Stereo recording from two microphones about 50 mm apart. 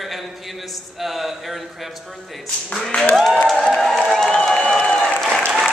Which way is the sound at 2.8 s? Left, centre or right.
Centre.